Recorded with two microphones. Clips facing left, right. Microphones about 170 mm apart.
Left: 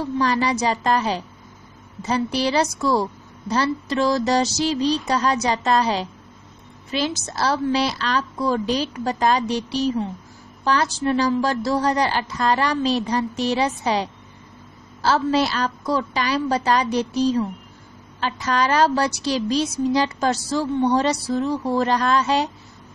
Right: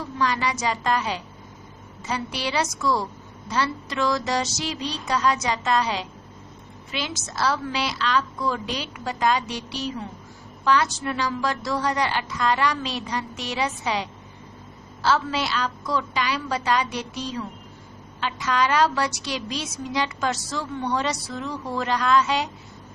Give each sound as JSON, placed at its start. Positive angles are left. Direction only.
{"t": 0.2, "sound": "a woman's voice", "side_deg": 35}